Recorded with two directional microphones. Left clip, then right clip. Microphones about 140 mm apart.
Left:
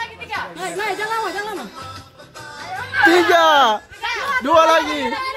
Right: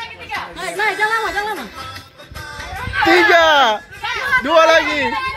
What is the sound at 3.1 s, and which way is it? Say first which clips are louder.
Speech: right 3 dB; 15° left (ahead or behind).